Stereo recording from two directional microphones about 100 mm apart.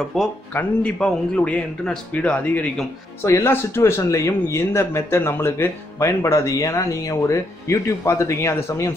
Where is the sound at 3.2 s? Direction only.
25° left (ahead or behind).